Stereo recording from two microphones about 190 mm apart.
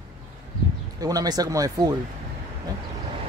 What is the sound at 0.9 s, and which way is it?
Speech, 20° right (ahead or behind).